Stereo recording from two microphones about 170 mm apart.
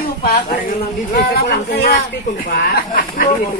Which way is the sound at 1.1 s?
70° left (ahead or behind).